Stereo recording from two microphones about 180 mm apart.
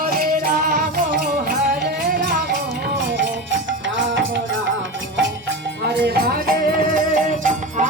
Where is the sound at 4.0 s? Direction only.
90° right.